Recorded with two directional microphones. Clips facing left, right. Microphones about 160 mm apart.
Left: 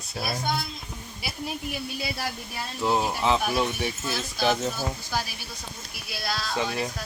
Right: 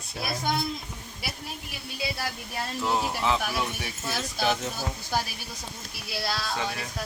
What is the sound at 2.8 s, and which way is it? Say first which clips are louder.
Speech: left 3 dB; 20° left (ahead or behind).